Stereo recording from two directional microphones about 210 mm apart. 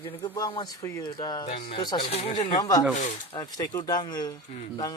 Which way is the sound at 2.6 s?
15° left (ahead or behind).